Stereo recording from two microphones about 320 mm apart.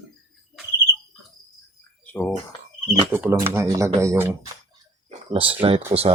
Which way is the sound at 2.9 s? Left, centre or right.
Centre.